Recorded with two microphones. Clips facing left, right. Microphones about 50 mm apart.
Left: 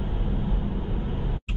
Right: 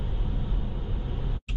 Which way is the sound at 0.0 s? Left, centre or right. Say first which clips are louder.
Left 6 dB; left.